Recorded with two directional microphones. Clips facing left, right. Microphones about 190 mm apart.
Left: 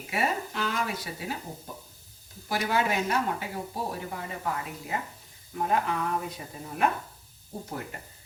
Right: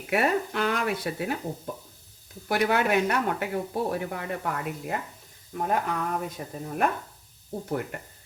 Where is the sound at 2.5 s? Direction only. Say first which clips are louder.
Right 4 dB; 60° right (ahead or behind).